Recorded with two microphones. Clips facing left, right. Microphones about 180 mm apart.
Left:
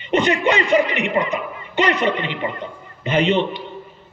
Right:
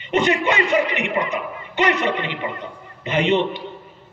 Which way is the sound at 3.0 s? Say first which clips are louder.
Left 1 dB; 20° right (ahead or behind).